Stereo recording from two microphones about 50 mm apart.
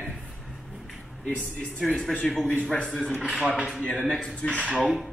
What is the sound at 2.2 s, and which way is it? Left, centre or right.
Speech, centre.